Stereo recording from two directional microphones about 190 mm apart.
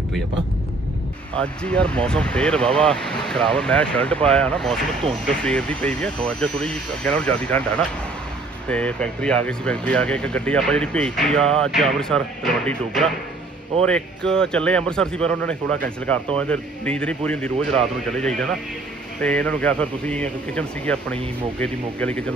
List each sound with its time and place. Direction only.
1.4 s a man's voice: 5° left (ahead or behind)